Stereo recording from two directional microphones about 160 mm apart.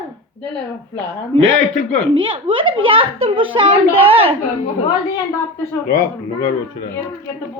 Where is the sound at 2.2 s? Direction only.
35° right (ahead or behind).